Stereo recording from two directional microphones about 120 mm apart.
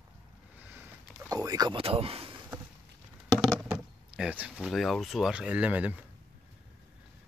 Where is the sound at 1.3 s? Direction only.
30° right (ahead or behind).